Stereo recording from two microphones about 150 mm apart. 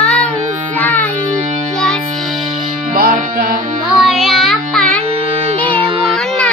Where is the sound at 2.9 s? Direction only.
70° right (ahead or behind).